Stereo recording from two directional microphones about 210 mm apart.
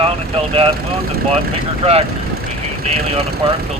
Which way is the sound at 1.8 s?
30° right (ahead or behind).